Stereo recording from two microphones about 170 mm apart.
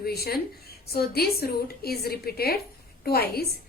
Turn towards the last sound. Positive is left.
turn(degrees=70)  # may be behind; listen again after turning